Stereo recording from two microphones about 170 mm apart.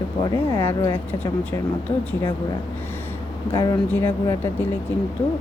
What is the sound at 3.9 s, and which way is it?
Speech, 10° left (ahead or behind).